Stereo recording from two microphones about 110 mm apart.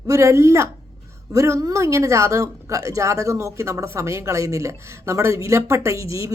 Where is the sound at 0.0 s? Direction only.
30° right (ahead or behind).